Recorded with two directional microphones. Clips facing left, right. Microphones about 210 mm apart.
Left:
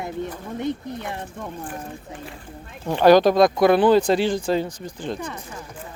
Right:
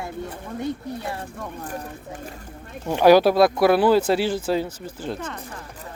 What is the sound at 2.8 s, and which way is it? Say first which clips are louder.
Speech: even; 10° right (ahead or behind).